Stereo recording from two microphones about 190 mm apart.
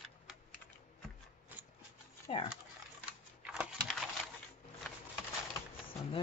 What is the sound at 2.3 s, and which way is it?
Speech, 35° left (ahead or behind).